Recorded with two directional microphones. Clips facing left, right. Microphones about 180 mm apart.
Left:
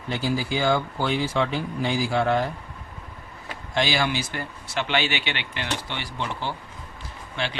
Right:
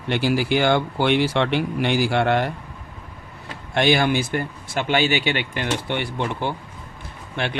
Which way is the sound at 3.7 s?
55° right (ahead or behind).